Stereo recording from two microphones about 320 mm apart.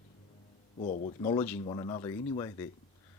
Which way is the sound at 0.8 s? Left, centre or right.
Left.